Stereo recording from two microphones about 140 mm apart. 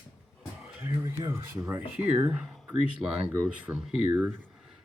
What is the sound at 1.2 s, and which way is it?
Speech, 15° right (ahead or behind).